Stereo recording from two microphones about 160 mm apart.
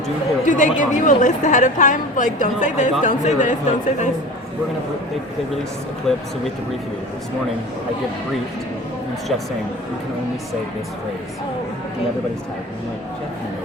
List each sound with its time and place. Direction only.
0.4 s a woman's voice: 55° left (ahead or behind)
6.1 s speech: centre (ahead or behind)